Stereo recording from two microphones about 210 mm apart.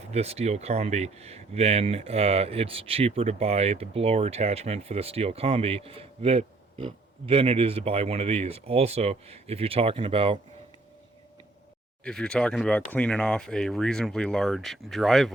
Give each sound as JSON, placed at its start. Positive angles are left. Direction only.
{"t": 0.1, "sound": "speech", "side_deg": -30}
{"t": 12.0, "sound": "speech", "side_deg": 5}